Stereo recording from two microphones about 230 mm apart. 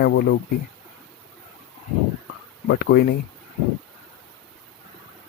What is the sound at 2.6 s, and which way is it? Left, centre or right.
Speech, left.